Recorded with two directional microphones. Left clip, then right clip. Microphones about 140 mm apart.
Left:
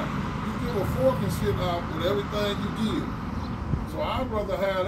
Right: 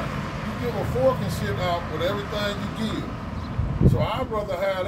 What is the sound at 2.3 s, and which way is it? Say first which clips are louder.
Speech: right 1 dB; 55° right (ahead or behind).